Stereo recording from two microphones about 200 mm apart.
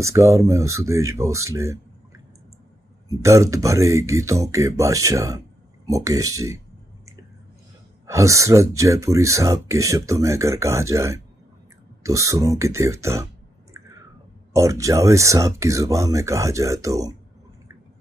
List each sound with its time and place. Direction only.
0.0 s speech: 15° right (ahead or behind)
8.1 s speech: 15° right (ahead or behind)
14.5 s speech: 15° right (ahead or behind)